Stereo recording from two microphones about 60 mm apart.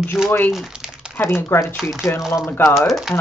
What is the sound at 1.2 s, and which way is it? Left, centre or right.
Speech, left.